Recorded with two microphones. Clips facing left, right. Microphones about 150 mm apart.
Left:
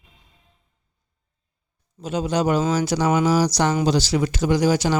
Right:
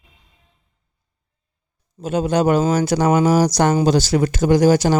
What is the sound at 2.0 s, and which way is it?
Speech, 55° right (ahead or behind).